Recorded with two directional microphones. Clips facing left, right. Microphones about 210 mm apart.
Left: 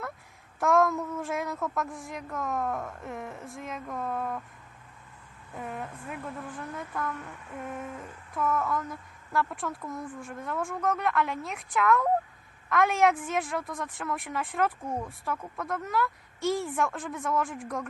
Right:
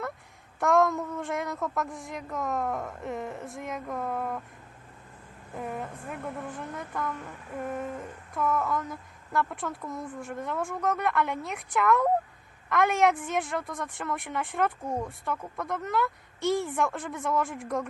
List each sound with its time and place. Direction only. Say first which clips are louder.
0.6 s a woman's voice: right 1 dB; centre (ahead or behind)
5.5 s a woman's voice: right 2 dB; centre (ahead or behind)
8.3 s a woman's voice: right 1 dB; centre (ahead or behind)